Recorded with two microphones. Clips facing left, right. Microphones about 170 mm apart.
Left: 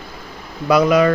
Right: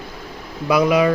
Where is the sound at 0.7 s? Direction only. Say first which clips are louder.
Left 2 dB; 10° right (ahead or behind).